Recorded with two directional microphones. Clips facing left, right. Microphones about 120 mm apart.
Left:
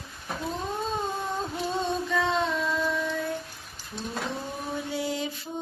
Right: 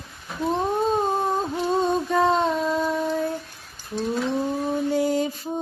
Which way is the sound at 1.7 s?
45° right (ahead or behind).